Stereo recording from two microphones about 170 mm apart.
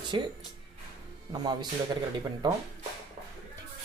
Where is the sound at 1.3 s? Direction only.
25° right (ahead or behind).